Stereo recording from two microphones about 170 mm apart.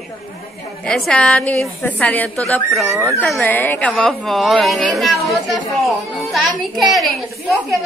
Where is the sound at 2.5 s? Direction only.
Centre (ahead or behind).